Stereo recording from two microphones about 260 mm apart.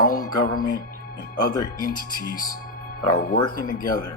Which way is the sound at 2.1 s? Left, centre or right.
Left.